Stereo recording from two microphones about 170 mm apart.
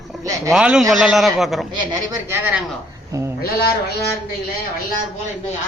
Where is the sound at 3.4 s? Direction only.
65° left (ahead or behind).